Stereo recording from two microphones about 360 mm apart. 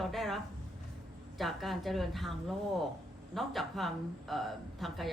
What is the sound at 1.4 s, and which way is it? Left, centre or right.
Speech, centre.